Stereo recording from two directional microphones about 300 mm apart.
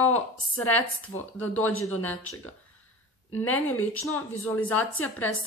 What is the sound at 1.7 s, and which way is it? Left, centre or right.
Speech, left.